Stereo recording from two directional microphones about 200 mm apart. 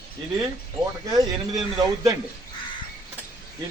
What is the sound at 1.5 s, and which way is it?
Speech, 20° right (ahead or behind).